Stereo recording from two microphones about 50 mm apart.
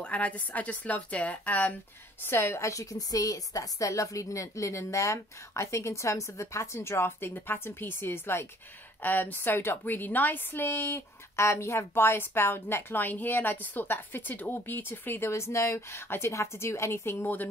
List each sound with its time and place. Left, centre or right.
0.0 s a woman's voice: left
2.2 s a woman's voice: left
3.5 s a woman's voice: left
9.0 s a woman's voice: left